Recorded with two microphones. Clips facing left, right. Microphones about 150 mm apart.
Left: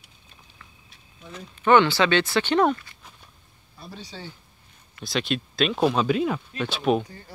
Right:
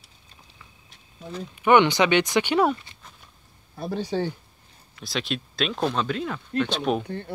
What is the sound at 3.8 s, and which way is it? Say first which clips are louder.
Speech: right 13 dB; 50° right (ahead or behind).